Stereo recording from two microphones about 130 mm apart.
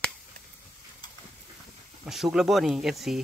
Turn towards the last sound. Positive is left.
turn(degrees=0)  # may be behind; listen again after turning